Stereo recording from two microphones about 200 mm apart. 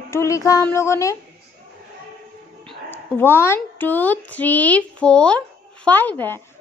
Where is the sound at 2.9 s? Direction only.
10° left (ahead or behind).